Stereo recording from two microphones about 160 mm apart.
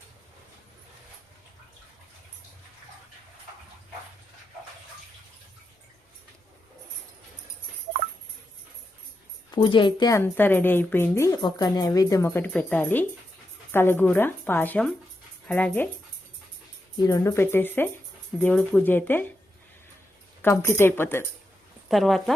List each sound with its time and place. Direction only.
9.5 s a woman's voice: 30° left (ahead or behind); by 15.9 s 10° left (ahead or behind)
17.0 s a woman's voice: 20° left (ahead or behind)
20.4 s a woman's voice: 15° left (ahead or behind)
21.8 s speech: centre (ahead or behind)